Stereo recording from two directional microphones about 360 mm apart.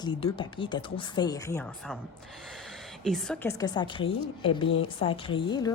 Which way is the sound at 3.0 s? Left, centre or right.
Centre.